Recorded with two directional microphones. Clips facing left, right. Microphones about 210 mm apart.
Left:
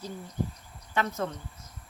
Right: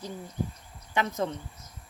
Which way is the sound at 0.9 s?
15° right (ahead or behind).